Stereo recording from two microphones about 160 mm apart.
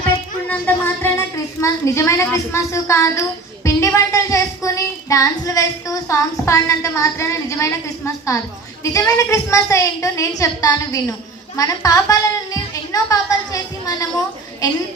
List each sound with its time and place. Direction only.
0.4 s a woman's voice: 10° left (ahead or behind)